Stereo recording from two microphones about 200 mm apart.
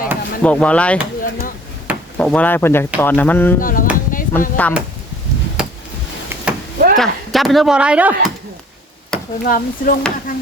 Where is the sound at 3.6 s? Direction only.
45° left (ahead or behind).